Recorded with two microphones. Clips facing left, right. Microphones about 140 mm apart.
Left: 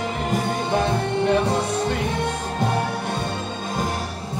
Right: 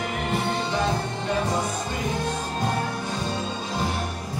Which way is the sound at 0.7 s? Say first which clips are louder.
Left 4 dB; 60° left (ahead or behind).